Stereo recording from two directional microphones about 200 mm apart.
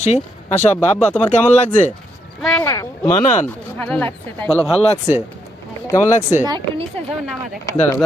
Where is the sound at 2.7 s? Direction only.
15° left (ahead or behind).